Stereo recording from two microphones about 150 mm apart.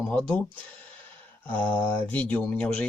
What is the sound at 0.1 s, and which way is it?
Speech, 10° left (ahead or behind).